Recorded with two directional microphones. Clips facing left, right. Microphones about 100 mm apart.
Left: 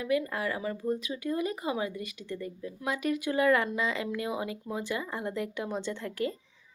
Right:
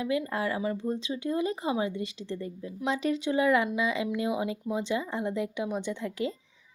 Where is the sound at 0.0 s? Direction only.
25° right (ahead or behind).